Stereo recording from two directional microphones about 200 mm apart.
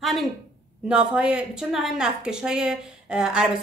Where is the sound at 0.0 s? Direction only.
Centre (ahead or behind).